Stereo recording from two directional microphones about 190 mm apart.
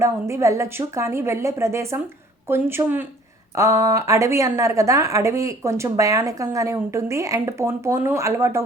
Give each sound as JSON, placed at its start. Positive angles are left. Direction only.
{"t": 0.0, "sound": "a woman's voice", "side_deg": -15}